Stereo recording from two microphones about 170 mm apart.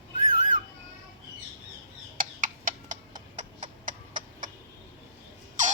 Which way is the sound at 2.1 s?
55° right (ahead or behind).